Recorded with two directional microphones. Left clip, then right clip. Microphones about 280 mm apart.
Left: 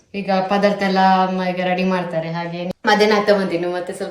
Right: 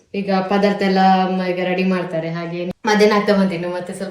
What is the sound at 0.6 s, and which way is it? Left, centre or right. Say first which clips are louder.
Speech: right 1 dB; centre.